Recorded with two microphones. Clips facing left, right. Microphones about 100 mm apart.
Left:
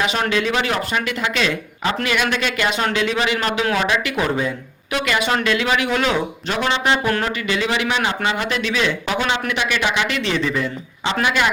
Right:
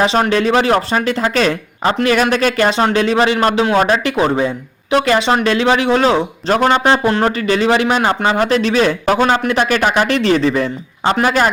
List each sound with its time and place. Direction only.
0.0 s speech: 35° right (ahead or behind)